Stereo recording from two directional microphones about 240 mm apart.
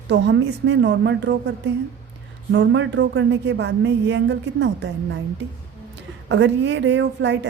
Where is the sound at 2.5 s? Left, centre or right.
Right.